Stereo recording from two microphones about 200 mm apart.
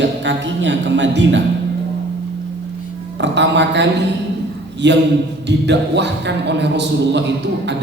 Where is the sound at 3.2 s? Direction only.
60° right (ahead or behind).